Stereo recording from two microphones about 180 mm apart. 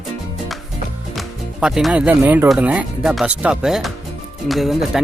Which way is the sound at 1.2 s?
Centre (ahead or behind).